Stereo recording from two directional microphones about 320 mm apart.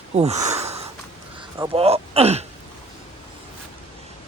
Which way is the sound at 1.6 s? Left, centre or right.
Centre.